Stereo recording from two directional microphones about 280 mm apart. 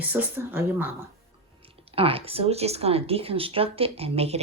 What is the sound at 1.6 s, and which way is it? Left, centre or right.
Speech, centre.